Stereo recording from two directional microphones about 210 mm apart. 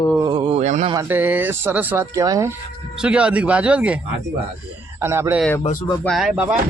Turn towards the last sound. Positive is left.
turn(degrees=-5)  # may be behind; listen again after turning